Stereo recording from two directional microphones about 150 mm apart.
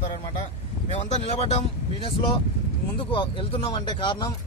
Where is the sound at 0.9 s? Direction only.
45° left (ahead or behind).